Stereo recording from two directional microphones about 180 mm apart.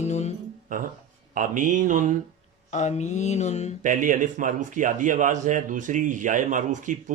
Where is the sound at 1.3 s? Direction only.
45° right (ahead or behind).